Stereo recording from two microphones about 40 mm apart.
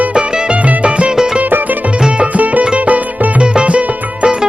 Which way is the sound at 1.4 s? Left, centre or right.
Right.